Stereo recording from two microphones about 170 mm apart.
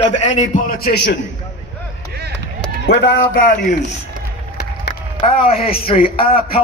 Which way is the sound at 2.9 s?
90° left.